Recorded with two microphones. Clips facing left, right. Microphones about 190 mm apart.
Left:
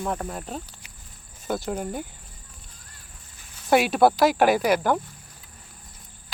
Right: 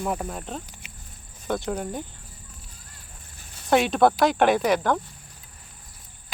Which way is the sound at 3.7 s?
5° left (ahead or behind).